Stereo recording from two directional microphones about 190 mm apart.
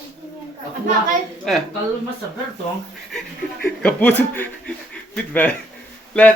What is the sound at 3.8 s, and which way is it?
A man's voice, 10° left (ahead or behind).